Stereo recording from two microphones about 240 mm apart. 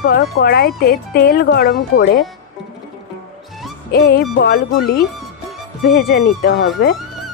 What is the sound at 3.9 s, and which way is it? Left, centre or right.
Speech, left.